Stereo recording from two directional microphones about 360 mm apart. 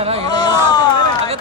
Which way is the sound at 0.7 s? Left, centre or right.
Centre.